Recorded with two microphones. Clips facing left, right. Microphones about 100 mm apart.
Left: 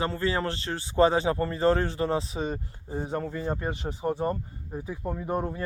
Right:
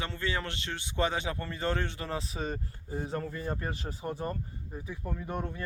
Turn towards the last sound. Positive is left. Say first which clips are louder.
# left 6 dB
turn(degrees=30)  # may be behind; listen again after turning